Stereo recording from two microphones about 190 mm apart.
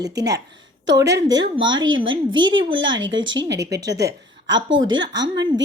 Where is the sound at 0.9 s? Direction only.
65° right (ahead or behind).